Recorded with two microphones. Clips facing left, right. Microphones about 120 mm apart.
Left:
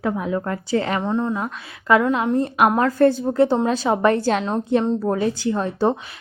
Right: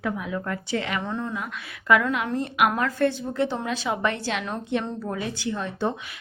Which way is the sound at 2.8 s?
40° left (ahead or behind).